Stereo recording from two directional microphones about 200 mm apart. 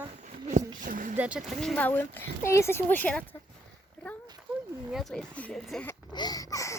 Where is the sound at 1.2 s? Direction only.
5° right (ahead or behind).